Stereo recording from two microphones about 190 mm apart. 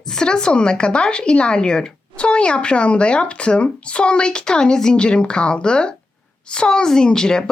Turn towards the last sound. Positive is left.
turn(degrees=5)  # may be behind; listen again after turning